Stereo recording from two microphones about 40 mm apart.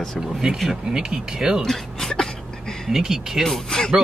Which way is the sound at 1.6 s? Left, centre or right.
Centre.